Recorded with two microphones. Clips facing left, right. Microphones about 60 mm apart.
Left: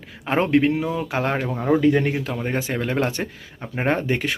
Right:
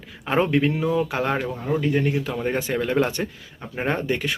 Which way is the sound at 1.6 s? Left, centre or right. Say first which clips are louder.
Left 6 dB; left.